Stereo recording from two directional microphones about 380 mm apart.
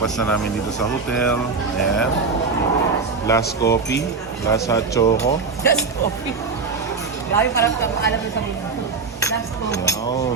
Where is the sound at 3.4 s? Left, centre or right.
Left.